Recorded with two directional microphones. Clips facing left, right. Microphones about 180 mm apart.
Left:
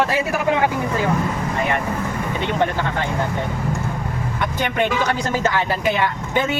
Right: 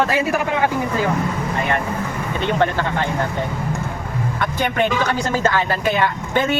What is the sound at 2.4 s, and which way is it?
Speech, 15° left (ahead or behind).